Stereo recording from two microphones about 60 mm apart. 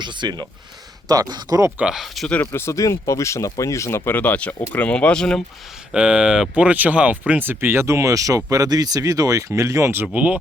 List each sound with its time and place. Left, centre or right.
1.0 s speech: right
2.2 s speech: centre
2.5 s speech: left
2.7 s speech: left
4.2 s speech: left
5.9 s speech: centre
6.6 s speech: right
8.4 s speech: right
9.5 s speech: right
10.1 s speech: right